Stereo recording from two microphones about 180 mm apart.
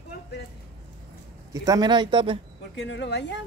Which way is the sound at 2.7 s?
75° left (ahead or behind).